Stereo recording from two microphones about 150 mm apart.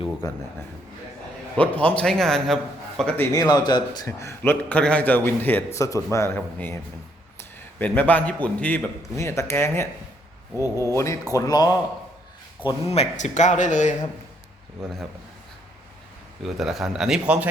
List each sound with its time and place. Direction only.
0.2 s speech: 25° left (ahead or behind)
1.5 s a man's voice: 10° left (ahead or behind)
3.3 s speech: 25° left (ahead or behind)
4.7 s a man's voice: 10° left (ahead or behind)
10.5 s speech: 20° right (ahead or behind)
10.9 s speech: 20° left (ahead or behind)
12.6 s speech: 45° left (ahead or behind)
16.6 s a man's voice: centre (ahead or behind)